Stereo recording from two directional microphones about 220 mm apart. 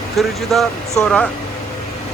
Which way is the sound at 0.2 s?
Centre (ahead or behind).